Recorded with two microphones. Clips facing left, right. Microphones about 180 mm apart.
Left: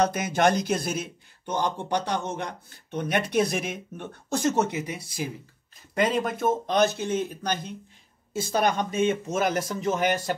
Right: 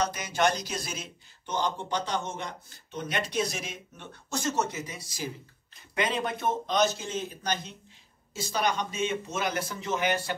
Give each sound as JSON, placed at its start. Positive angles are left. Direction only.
{"t": 0.0, "sound": "speech", "side_deg": 55}
{"t": 6.2, "sound": "speech", "side_deg": 45}